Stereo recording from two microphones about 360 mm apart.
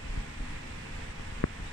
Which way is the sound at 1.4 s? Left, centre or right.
Left.